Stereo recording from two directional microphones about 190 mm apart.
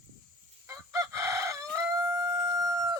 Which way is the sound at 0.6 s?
15° right (ahead or behind).